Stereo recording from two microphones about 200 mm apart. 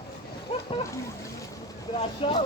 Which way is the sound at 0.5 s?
30° left (ahead or behind).